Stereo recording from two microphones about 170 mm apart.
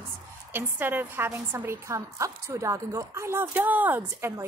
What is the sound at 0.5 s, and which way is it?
A woman's voice, 10° right (ahead or behind).